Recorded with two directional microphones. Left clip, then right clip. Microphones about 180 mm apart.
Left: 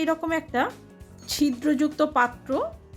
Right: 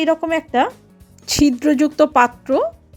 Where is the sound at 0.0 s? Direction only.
30° right (ahead or behind).